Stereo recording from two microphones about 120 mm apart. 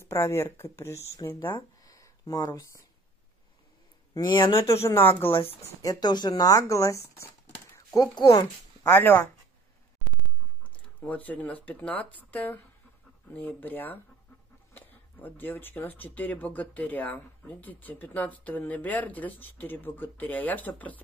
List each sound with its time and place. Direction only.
0.0 s speech: 25° left (ahead or behind)
1.8 s a sound: 30° left (ahead or behind)
4.1 s speech: 35° left (ahead or behind)
4.6 s speech: 20° left (ahead or behind)
5.3 s speech: 50° left (ahead or behind)
5.8 s speech: 30° left (ahead or behind)
8.2 s speech: 35° left (ahead or behind)
8.8 s speech: 20° left (ahead or behind)
10.6 s speech: 10° left (ahead or behind)